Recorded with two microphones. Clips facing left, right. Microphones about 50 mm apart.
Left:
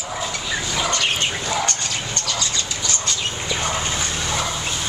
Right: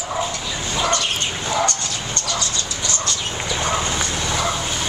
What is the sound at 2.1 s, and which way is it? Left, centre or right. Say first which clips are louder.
Bird: right 3 dB; right.